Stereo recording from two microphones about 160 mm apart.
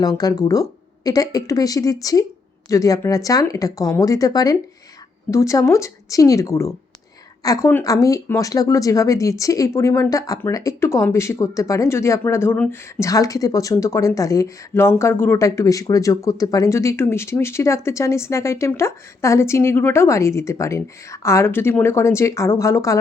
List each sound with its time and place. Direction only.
0.0 s speech: 25° left (ahead or behind)